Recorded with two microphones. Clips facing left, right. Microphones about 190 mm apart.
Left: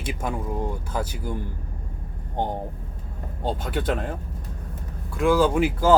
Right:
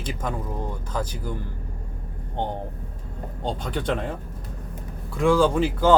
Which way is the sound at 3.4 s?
5° left (ahead or behind).